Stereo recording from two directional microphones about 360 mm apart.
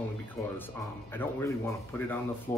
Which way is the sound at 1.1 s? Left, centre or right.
Centre.